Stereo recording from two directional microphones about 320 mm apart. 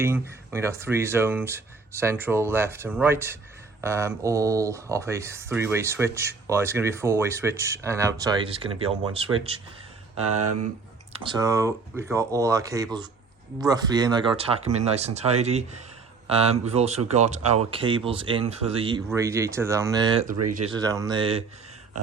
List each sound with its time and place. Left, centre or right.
0.0 s speech: centre
10.3 s speech: right
11.1 s speech: centre